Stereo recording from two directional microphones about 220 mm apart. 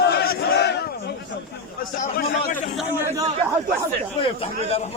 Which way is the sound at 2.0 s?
40° left (ahead or behind).